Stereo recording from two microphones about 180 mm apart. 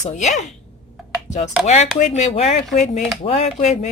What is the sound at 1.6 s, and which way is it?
Speech, 40° left (ahead or behind).